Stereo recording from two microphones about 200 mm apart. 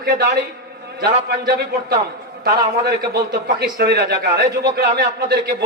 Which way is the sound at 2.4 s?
55° right (ahead or behind).